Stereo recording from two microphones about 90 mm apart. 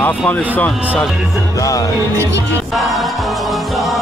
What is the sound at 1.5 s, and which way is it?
Speech, 40° left (ahead or behind).